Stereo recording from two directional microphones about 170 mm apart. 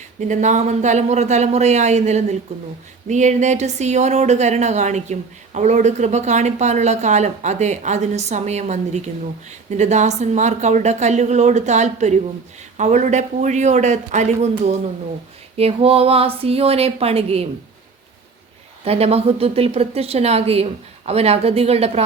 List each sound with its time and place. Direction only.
0.2 s speech: 45° right (ahead or behind)
18.9 s speech: 35° right (ahead or behind)